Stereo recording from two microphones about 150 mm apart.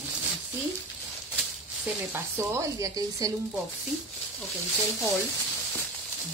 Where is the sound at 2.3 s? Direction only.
20° right (ahead or behind).